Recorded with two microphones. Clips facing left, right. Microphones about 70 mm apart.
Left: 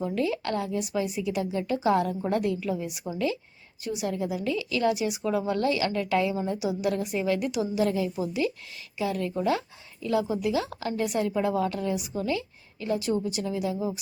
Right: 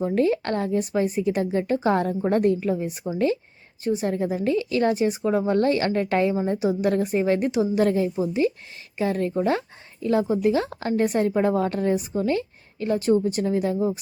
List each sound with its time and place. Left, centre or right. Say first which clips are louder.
0.0 s a woman's voice: right 6 dB; right